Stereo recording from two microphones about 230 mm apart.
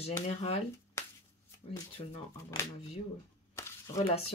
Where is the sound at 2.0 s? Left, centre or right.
Left.